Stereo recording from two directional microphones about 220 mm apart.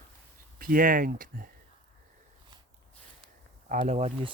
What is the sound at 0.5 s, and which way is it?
Speech, 40° right (ahead or behind).